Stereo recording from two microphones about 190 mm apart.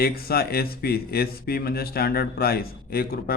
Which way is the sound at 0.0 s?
55° left (ahead or behind).